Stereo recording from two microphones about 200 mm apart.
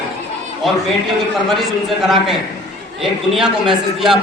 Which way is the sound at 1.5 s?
Centre (ahead or behind).